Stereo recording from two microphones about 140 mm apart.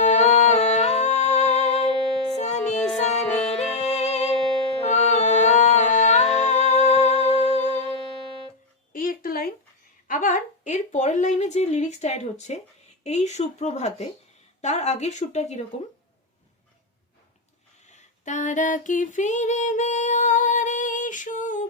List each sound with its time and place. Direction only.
0.0 s music: 55° left (ahead or behind)
3.2 s music: 10° left (ahead or behind)
3.8 s music: 50° left (ahead or behind)
8.9 s a sound: 85° left
10.1 s a sound: 75° left (ahead or behind); by 12.5 s 55° left (ahead or behind)
13.1 s speech: 55° left (ahead or behind)
17.8 s female singing: 60° left (ahead or behind)